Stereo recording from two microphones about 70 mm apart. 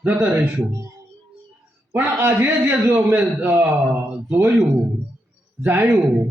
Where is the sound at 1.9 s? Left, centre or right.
Right.